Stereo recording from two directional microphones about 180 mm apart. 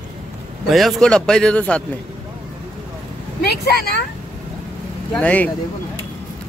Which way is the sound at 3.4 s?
65° left (ahead or behind).